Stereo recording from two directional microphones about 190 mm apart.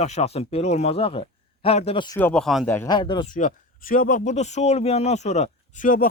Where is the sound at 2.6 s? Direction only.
10° left (ahead or behind).